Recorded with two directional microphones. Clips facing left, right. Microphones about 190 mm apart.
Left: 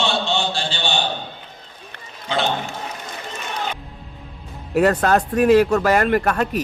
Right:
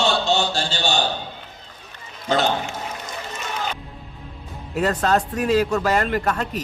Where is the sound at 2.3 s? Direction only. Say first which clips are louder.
Right 2 dB; 45° right (ahead or behind).